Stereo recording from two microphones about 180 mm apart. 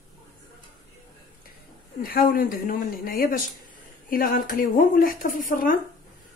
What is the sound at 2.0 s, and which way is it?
Speech, 55° left (ahead or behind).